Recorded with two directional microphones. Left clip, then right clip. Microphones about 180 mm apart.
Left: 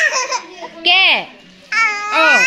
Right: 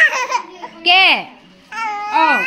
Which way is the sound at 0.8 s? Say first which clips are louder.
Even; 20° right (ahead or behind).